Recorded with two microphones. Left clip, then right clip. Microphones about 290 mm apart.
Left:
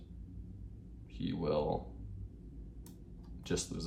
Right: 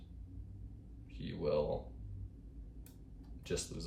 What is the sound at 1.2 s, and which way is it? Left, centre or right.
Speech, centre.